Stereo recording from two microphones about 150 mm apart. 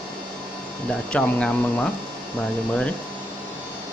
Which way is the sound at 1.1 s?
5° left (ahead or behind).